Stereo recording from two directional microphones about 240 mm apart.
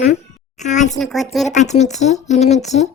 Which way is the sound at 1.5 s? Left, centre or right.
Left.